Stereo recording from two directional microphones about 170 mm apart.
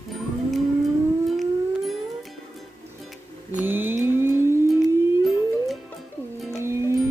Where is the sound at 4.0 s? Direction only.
15° right (ahead or behind).